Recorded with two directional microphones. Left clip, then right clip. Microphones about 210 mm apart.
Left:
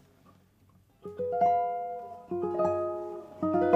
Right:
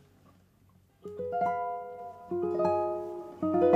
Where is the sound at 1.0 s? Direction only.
30° right (ahead or behind).